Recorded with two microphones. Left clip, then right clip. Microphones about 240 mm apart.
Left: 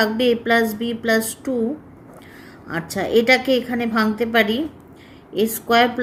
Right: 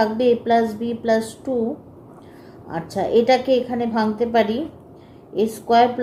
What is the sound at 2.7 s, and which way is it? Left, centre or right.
A woman's voice, left.